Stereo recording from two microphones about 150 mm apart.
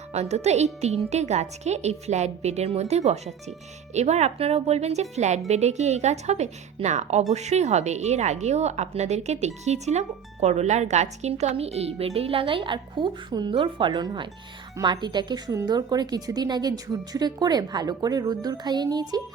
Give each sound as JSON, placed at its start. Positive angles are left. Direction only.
{"t": 0.1, "sound": "a woman's voice", "side_deg": -45}